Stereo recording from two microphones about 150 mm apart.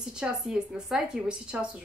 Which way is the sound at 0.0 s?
5° right (ahead or behind).